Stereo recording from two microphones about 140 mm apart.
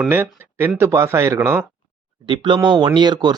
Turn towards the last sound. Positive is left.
turn(degrees=-30)  # may be behind; listen again after turning